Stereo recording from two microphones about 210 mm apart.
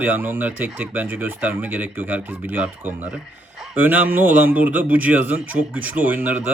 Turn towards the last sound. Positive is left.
turn(degrees=-10)  # may be behind; listen again after turning